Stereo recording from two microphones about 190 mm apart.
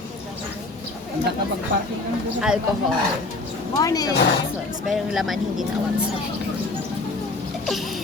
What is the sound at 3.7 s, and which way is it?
Speech, 20° left (ahead or behind).